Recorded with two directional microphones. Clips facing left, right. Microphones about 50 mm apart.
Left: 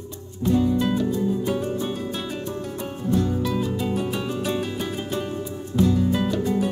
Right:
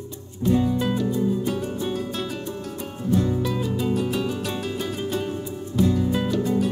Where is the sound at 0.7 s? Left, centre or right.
Centre.